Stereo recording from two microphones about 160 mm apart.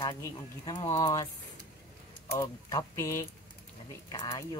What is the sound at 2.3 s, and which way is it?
Speech, 25° left (ahead or behind).